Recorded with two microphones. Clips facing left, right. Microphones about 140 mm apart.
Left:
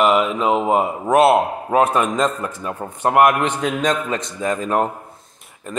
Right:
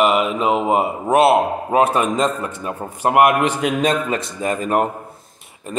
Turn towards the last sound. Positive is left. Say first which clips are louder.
# right 1 dB
turn(degrees=0)  # may be behind; listen again after turning